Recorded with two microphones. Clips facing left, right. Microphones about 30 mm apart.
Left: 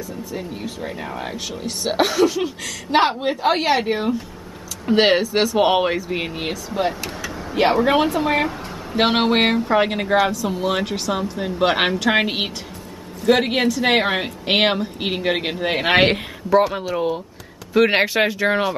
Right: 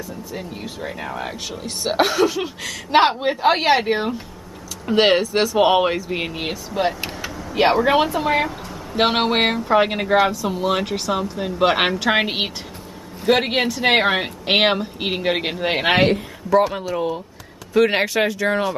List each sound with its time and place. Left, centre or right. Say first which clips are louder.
0.4 s speech: left 1 dB; centre
3.9 s speech: even; right
4.8 s speech: even; centre
8.0 s speech: even; centre
16.6 s speech: left 1 dB; centre